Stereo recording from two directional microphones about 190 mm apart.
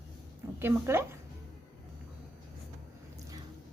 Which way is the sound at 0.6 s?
15° right (ahead or behind).